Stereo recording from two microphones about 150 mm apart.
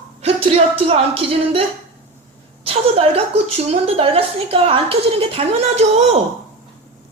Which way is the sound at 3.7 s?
40° right (ahead or behind).